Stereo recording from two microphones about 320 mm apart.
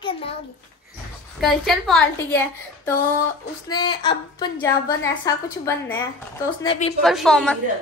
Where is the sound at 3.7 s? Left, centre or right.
Centre.